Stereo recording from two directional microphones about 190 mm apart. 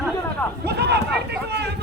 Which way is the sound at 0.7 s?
60° right (ahead or behind).